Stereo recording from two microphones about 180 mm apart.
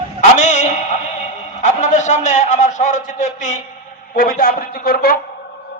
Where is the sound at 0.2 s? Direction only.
40° left (ahead or behind).